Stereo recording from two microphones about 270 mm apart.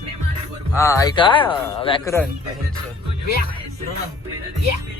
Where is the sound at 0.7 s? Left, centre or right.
Centre.